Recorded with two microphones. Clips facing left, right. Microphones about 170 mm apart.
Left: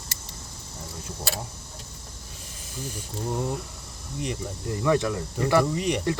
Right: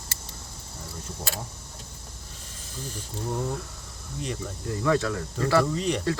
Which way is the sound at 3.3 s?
10° left (ahead or behind).